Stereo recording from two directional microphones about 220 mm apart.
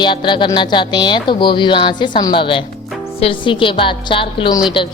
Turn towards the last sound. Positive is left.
turn(degrees=20)  # may be behind; listen again after turning